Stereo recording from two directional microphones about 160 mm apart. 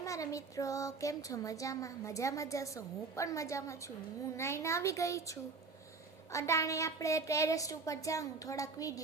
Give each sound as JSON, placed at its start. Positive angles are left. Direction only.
{"t": 0.0, "sound": "speech", "side_deg": 20}